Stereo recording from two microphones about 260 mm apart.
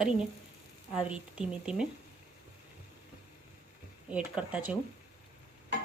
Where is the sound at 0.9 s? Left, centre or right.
Centre.